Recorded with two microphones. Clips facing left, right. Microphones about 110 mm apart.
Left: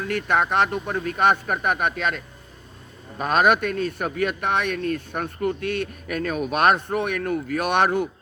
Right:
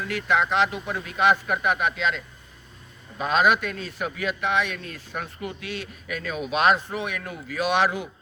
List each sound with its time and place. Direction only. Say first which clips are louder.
0.0 s a man's voice: left 2 dB; 50° left (ahead or behind)